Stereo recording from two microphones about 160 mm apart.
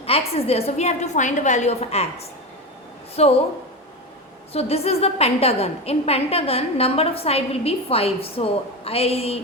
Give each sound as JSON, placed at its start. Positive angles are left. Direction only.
{"t": 0.0, "sound": "a woman's voice", "side_deg": 40}
{"t": 4.5, "sound": "a woman's voice", "side_deg": 40}